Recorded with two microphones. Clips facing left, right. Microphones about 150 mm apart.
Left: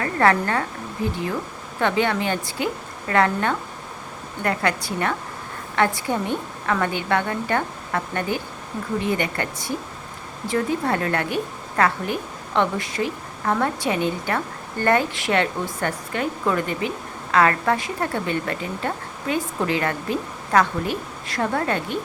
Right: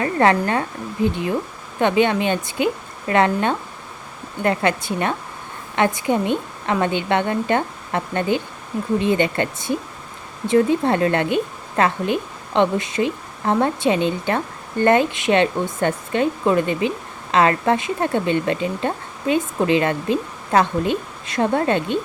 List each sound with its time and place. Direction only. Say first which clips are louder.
0.0 s a woman's voice: right 2 dB; 20° right (ahead or behind)